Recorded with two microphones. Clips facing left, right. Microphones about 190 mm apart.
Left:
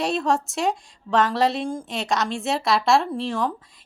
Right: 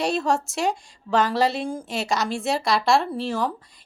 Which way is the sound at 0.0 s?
Centre (ahead or behind).